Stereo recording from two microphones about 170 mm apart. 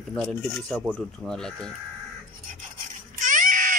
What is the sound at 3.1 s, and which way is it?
Baby cry, 50° right (ahead or behind).